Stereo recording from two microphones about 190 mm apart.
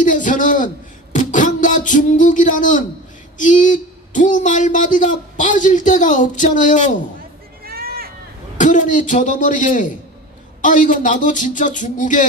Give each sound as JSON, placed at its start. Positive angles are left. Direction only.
{"t": 0.0, "sound": "a man's voice", "side_deg": 45}
{"t": 7.6, "sound": "a sound", "side_deg": -55}
{"t": 8.5, "sound": "speech", "side_deg": 40}